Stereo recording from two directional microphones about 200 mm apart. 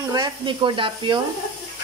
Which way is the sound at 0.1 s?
20° right (ahead or behind).